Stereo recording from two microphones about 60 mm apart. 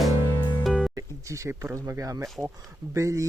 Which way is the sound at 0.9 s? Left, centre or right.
Right.